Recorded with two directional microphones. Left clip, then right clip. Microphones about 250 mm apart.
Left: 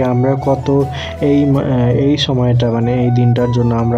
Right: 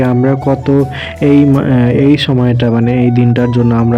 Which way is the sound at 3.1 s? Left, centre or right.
Centre.